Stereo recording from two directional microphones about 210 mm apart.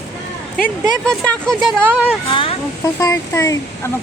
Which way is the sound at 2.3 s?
25° left (ahead or behind).